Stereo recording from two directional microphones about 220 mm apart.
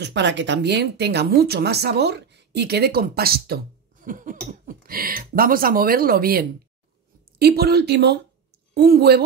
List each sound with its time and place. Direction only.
0.0 s speech: 55° right (ahead or behind)